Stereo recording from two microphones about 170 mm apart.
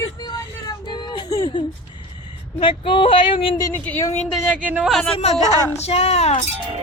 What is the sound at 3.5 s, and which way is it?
Speech, 20° left (ahead or behind).